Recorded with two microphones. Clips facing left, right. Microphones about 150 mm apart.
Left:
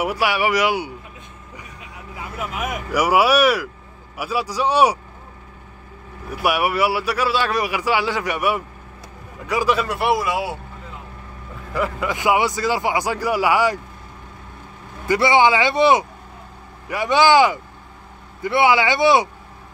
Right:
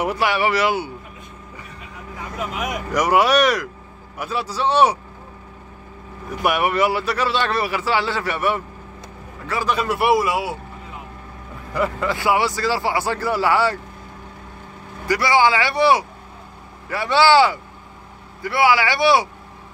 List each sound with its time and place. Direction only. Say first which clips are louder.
0.0 s a man's voice: even; 10° left (ahead or behind)
2.1 s a man's voice: right 1 dB; 5° left (ahead or behind)
6.3 s a man's voice: even; 10° left (ahead or behind)
9.7 s speech: right 2 dB; centre (ahead or behind)
11.7 s speech: right 1 dB; 5° left (ahead or behind)
12.1 s a man's voice: left 3 dB; 15° left (ahead or behind)
15.0 s a man's voice: left 2 dB; 25° left (ahead or behind)